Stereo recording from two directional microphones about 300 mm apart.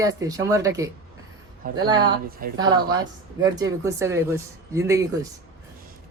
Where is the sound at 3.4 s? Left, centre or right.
Centre.